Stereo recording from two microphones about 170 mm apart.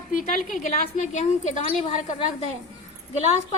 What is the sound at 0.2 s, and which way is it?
A woman's voice, 50° left (ahead or behind).